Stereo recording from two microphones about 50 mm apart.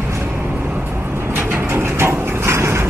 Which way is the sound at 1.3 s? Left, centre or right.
Right.